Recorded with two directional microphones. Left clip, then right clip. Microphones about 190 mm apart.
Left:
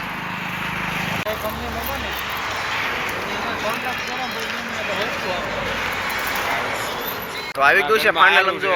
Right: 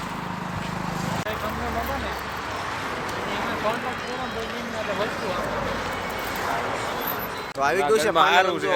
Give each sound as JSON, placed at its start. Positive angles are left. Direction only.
{"t": 7.6, "sound": "speech", "side_deg": -10}
{"t": 8.1, "sound": "speech", "side_deg": -75}